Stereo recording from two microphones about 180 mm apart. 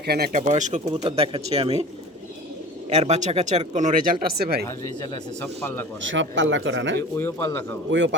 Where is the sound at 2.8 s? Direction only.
35° right (ahead or behind); by 4.6 s 60° right (ahead or behind).